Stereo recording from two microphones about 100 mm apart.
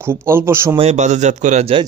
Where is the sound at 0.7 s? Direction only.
75° right (ahead or behind).